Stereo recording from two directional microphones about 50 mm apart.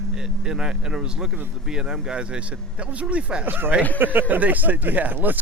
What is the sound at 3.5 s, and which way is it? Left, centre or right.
Speech, right.